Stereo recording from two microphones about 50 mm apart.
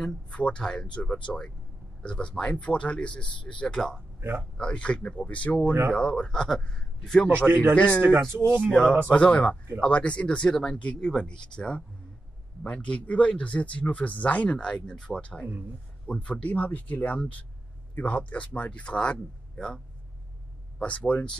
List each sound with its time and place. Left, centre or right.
0.3 s speech: left
3.7 s speech: centre
4.6 s speech: left
5.7 s a man's voice: right
5.9 s speech: centre
7.2 s a man's voice: right
8.6 s a man's voice: centre
9.1 s speech: left
14.6 s speech: centre
20.8 s speech: left